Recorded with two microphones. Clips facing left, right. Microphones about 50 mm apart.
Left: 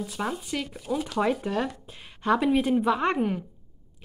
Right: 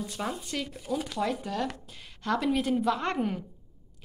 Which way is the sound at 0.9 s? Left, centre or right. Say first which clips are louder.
Left 5 dB; left.